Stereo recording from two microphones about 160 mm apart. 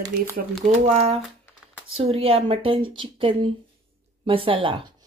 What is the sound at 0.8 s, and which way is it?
A woman's voice, 45° right (ahead or behind).